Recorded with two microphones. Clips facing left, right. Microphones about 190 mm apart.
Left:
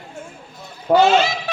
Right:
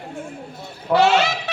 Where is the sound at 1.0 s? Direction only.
70° right (ahead or behind).